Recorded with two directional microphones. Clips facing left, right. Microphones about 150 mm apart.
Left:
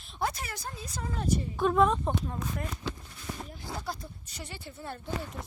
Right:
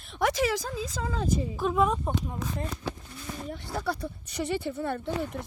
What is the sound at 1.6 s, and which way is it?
Speech, 5° right (ahead or behind).